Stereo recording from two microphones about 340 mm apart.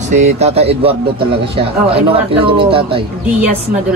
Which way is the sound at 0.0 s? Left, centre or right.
Centre.